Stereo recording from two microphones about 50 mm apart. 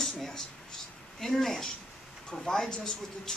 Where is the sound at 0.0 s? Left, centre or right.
Centre.